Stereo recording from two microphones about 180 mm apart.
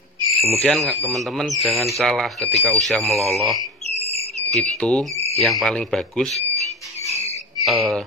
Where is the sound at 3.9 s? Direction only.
35° right (ahead or behind).